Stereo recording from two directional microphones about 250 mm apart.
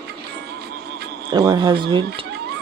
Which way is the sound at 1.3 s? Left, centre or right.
Centre.